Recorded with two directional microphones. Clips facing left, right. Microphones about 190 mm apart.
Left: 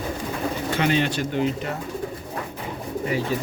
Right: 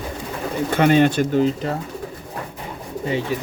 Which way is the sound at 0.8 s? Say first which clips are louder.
Right 8 dB; 50° right (ahead or behind).